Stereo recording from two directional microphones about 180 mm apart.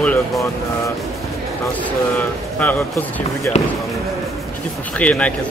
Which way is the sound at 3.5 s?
35° left (ahead or behind).